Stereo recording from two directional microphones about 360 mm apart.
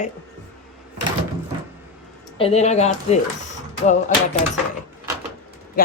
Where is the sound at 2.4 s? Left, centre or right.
Centre.